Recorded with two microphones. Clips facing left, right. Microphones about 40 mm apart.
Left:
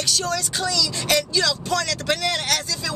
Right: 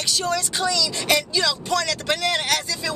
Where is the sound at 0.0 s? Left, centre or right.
Centre.